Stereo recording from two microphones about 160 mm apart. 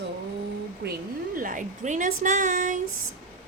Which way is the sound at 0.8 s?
90° right.